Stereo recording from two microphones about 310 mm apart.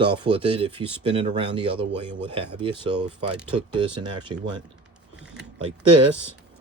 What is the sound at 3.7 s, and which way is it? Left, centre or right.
Speech, centre.